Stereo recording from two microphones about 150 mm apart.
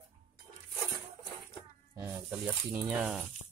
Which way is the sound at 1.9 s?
20° right (ahead or behind).